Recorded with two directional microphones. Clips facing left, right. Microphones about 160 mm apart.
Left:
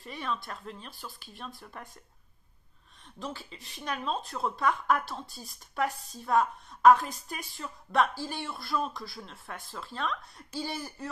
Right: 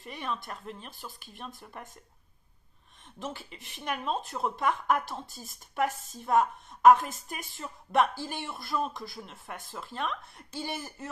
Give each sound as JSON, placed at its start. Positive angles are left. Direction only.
{"t": 0.0, "sound": "speech", "side_deg": -15}
{"t": 3.2, "sound": "speech", "side_deg": -20}
{"t": 5.2, "sound": "a woman's voice", "side_deg": -45}
{"t": 6.1, "sound": "speech", "side_deg": -15}